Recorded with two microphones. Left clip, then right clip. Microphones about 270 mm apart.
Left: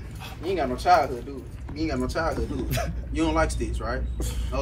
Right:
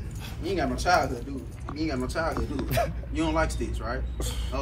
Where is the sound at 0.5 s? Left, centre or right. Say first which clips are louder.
Left 4 dB; left.